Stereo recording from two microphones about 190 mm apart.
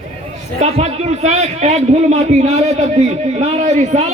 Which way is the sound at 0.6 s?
35° right (ahead or behind).